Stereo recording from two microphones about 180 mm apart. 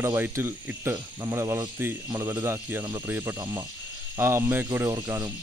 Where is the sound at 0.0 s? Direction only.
15° right (ahead or behind).